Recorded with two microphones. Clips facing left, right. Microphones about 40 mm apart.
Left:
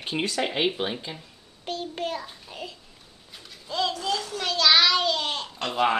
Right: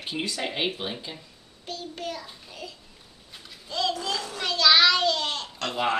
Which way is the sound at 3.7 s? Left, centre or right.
Centre.